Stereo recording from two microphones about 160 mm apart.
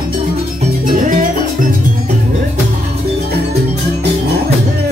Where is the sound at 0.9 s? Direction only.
55° right (ahead or behind).